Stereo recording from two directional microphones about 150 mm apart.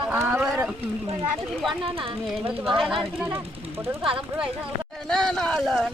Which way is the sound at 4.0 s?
35° right (ahead or behind).